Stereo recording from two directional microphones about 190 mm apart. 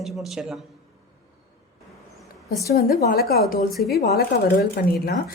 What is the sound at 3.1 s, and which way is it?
Speech, 50° left (ahead or behind).